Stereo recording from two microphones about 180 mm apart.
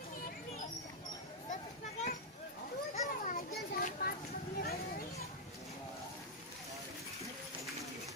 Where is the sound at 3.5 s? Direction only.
60° left (ahead or behind).